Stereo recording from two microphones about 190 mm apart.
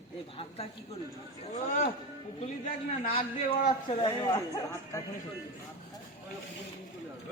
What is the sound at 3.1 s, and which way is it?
Speech, 30° left (ahead or behind).